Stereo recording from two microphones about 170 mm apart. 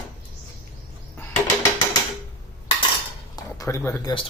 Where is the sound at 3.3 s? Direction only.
20° left (ahead or behind).